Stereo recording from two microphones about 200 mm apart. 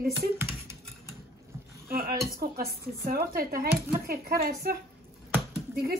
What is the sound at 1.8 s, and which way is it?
Speech, 45° right (ahead or behind).